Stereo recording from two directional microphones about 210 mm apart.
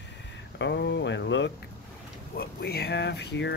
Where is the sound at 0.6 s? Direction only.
55° left (ahead or behind).